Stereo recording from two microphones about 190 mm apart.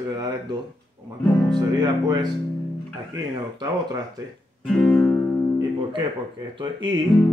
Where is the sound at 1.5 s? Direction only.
20° right (ahead or behind).